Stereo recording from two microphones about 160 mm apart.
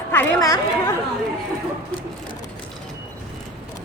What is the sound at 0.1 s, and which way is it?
Speech, 15° left (ahead or behind).